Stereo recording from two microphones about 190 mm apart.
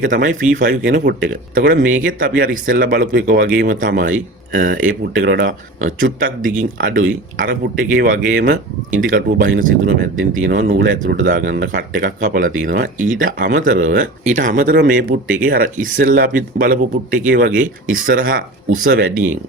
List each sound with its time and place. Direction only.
0.0 s speech: 45° right (ahead or behind)